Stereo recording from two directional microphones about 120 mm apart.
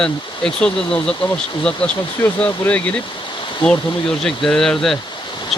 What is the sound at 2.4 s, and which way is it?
Speech, 10° left (ahead or behind).